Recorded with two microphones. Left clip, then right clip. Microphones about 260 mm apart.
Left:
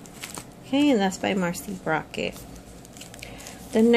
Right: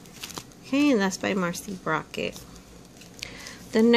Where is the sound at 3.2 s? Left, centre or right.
Centre.